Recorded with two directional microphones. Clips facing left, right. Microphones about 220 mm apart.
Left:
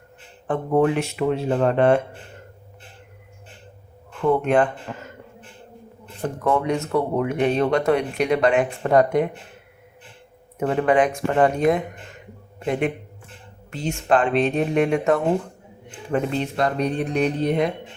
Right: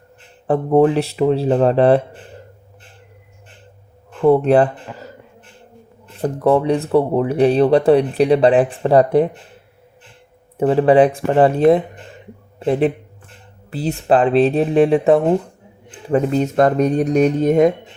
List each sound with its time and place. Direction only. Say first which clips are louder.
0.4 s speech: right 6 dB; 35° right (ahead or behind)
4.2 s speech: right 6 dB; 35° right (ahead or behind)
6.2 s speech: right 6 dB; 35° right (ahead or behind)
10.6 s a man's voice: right 7 dB; 30° right (ahead or behind)